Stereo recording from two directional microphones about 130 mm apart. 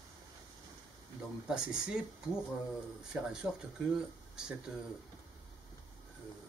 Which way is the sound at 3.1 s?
5° right (ahead or behind).